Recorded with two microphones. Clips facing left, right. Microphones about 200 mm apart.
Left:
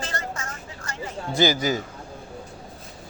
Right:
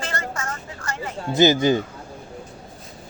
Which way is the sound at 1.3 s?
25° right (ahead or behind).